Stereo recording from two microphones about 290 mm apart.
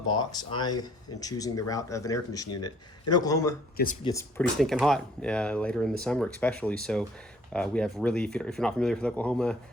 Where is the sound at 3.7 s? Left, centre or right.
Left.